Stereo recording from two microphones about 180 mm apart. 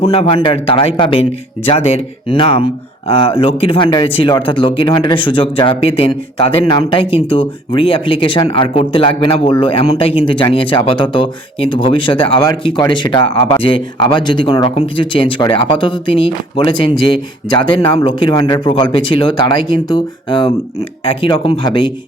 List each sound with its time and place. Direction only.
0.1 s speech: 35° left (ahead or behind)